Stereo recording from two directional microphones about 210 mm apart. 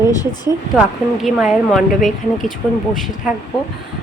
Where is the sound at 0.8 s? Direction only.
5° right (ahead or behind).